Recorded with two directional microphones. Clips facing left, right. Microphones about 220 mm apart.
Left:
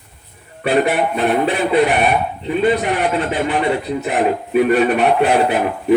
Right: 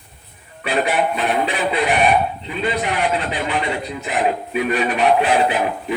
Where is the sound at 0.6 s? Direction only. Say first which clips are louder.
Left 4 dB; 60° left (ahead or behind).